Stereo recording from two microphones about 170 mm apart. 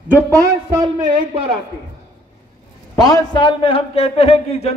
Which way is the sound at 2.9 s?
20° left (ahead or behind).